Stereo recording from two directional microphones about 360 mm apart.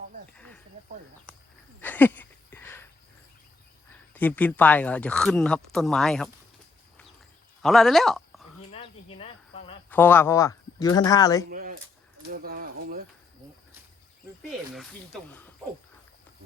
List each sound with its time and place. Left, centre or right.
0.3 s snake: centre
1.8 s a sound: centre
4.1 s speech: centre
7.6 s speech: centre
8.7 s cricket: centre
9.9 s speech: centre
11.4 s speech: right